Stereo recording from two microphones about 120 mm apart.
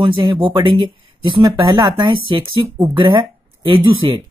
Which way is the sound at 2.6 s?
25° right (ahead or behind).